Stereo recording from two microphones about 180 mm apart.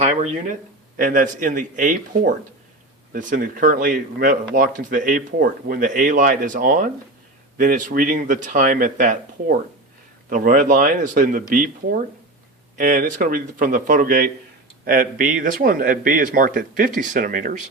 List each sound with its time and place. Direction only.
0.0 s speech: 40° right (ahead or behind)